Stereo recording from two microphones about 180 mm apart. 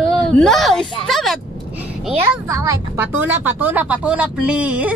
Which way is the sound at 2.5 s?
15° right (ahead or behind).